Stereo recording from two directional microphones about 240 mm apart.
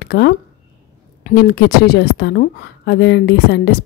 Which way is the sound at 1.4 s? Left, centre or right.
Left.